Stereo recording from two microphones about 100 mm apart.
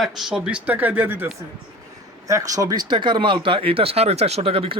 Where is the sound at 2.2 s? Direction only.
35° right (ahead or behind).